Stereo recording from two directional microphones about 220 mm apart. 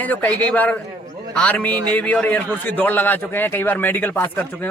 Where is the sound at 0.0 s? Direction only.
5° left (ahead or behind).